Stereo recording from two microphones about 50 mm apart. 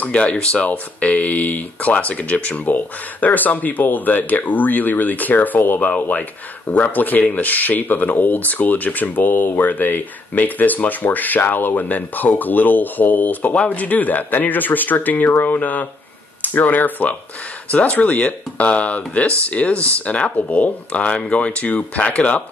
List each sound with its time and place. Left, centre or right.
0.0 s speech: left